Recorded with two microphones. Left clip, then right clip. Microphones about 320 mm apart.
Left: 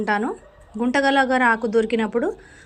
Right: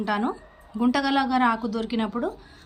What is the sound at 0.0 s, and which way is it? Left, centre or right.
A woman's voice, centre.